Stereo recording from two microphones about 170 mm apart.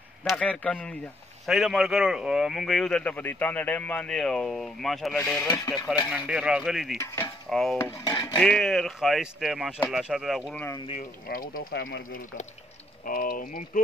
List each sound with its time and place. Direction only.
0.2 s a man's voice: 10° left (ahead or behind)
5.5 s dishes: 25° left (ahead or behind)
6.0 s speech: 5° right (ahead or behind)
7.4 s cutlery: centre (ahead or behind)
7.7 s dishes: 15° left (ahead or behind)
8.4 s speech: centre (ahead or behind)
11.2 s speech: 60° left (ahead or behind)